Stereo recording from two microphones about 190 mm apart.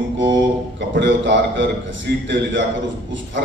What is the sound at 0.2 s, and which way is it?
Speech, 70° right (ahead or behind).